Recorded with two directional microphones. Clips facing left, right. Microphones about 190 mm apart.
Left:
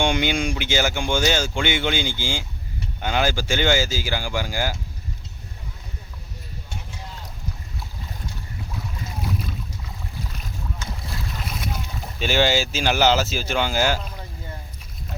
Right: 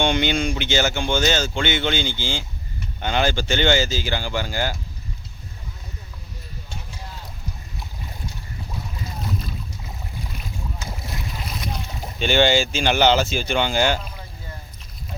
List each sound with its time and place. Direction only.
0.0 s speech: 10° left (ahead or behind)
10.8 s boat: 25° right (ahead or behind)
11.3 s boat: centre (ahead or behind)
12.2 s speech: 5° left (ahead or behind)